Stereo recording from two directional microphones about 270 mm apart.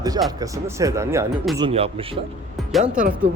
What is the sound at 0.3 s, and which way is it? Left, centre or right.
A man's voice, centre.